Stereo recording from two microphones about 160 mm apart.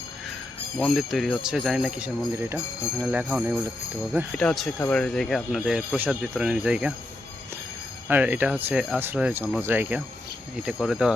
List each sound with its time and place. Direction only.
0.8 s speech: centre (ahead or behind)
8.0 s speech: 10° right (ahead or behind)
10.7 s speech: centre (ahead or behind)